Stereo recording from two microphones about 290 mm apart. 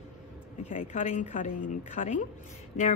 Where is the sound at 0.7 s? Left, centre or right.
Left.